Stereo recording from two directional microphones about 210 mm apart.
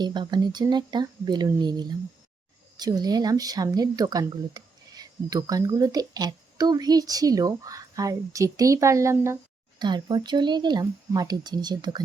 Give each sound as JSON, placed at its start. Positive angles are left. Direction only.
{"t": 0.0, "sound": "speech", "side_deg": -20}